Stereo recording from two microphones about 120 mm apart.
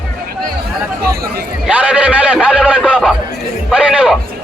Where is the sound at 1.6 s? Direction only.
10° right (ahead or behind).